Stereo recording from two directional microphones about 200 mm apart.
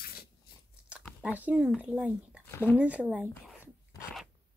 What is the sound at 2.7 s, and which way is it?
Speech, 5° right (ahead or behind).